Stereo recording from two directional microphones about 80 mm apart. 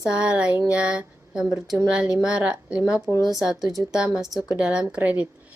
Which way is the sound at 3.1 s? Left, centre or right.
Right.